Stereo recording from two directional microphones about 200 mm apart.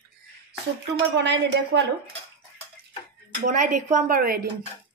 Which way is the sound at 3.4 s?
40° right (ahead or behind).